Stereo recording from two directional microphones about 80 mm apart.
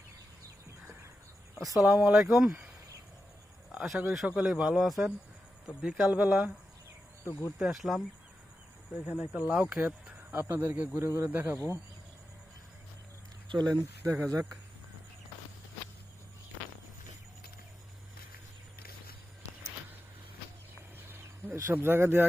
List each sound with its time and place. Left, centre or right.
1.5 s a man's voice: centre
1.9 s speech: centre
3.7 s a sound: centre
4.3 s a man's voice: centre
5.8 s speech: centre
7.6 s a man's voice: centre
9.0 s speech: centre
10.3 s speech: right
13.5 s speech: right
13.8 s speech: right
21.1 s a sound: right